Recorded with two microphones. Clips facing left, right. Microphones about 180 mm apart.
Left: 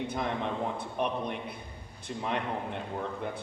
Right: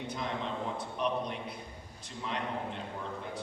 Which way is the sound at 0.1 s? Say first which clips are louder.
Left 4 dB; 55° left (ahead or behind).